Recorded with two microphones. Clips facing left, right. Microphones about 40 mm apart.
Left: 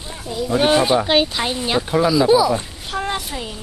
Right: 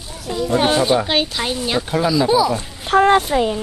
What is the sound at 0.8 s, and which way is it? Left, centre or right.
Speech, centre.